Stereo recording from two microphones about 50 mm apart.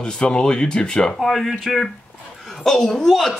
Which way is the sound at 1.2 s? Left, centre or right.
Centre.